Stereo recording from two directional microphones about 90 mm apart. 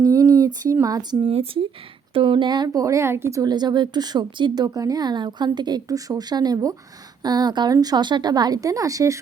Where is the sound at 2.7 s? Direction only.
35° right (ahead or behind).